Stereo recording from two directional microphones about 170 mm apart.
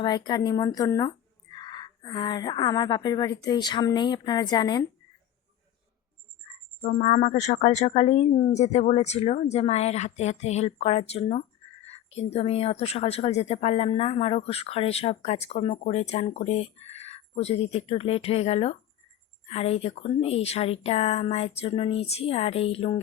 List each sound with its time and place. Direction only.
0.0 s speech: 25° left (ahead or behind)
6.8 s speech: 45° left (ahead or behind)